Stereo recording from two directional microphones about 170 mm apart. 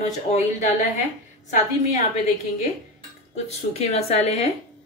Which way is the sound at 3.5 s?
40° left (ahead or behind).